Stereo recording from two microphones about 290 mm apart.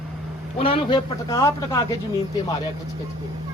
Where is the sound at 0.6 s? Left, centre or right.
Centre.